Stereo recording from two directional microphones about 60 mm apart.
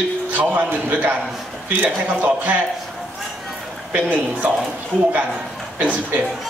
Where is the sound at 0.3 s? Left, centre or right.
Right.